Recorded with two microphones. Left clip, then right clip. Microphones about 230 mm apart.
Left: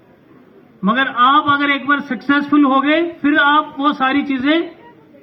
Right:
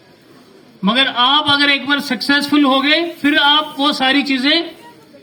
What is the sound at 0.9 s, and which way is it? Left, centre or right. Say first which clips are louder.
A man's voice: even; right.